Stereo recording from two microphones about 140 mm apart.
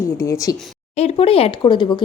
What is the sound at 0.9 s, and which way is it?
Speech, 45° left (ahead or behind).